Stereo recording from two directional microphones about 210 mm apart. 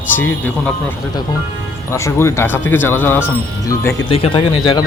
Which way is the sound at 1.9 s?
15° left (ahead or behind).